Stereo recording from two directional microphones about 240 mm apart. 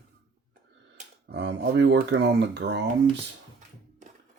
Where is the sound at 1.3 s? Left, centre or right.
Right.